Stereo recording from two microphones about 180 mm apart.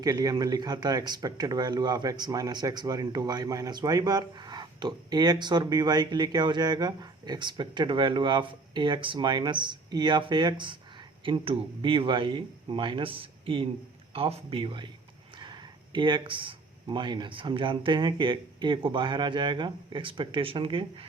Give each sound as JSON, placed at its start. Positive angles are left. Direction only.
{"t": 0.0, "sound": "speech", "side_deg": -20}